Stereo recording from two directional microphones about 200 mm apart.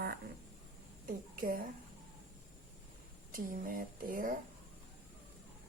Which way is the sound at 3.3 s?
45° right (ahead or behind).